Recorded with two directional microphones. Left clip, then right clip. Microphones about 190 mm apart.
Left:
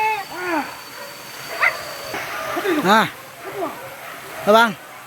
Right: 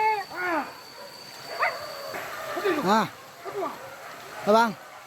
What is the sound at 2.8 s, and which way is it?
Speech, 10° right (ahead or behind).